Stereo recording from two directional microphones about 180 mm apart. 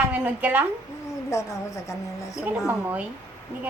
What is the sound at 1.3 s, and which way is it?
A woman's voice, 15° left (ahead or behind).